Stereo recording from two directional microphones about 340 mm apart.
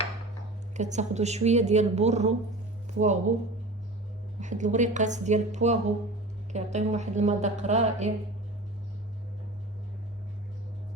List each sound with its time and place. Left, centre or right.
0.8 s a woman's voice: right
4.4 s a woman's voice: right